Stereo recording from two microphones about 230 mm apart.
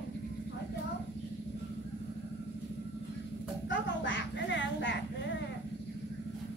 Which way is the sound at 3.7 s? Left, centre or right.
Left.